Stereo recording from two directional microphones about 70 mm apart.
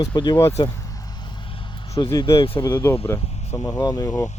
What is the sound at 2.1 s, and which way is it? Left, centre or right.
Speech, left.